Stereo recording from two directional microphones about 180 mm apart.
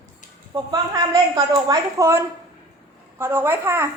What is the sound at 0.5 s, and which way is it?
A woman's voice, 25° right (ahead or behind).